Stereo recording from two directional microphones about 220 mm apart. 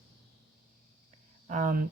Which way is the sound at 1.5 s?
35° right (ahead or behind).